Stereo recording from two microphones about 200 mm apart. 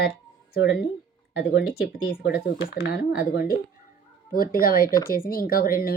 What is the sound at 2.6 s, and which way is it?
Speech, 55° left (ahead or behind).